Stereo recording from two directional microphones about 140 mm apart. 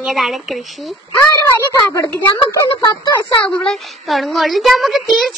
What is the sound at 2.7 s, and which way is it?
Speech, 35° left (ahead or behind).